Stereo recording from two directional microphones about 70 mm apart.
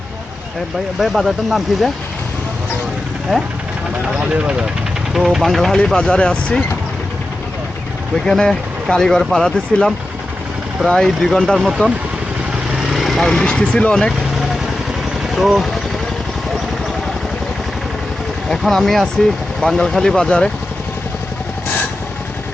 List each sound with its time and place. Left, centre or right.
0.9 s speech: centre
3.3 s speech: centre
4.2 s speech: centre
5.1 s speech: centre
5.7 s speech: centre
8.3 s speech: centre
15.4 s speech: centre
18.4 s speech: centre